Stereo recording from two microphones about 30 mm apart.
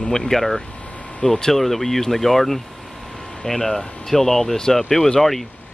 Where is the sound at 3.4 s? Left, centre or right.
Centre.